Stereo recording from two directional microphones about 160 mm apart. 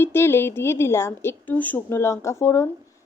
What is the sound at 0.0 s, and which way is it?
A woman's voice, 15° left (ahead or behind).